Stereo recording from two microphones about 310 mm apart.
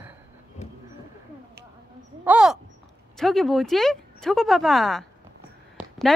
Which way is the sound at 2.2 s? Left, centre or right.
Centre.